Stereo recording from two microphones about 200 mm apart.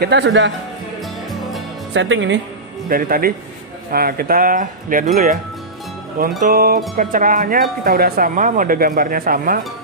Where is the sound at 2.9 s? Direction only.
45° right (ahead or behind).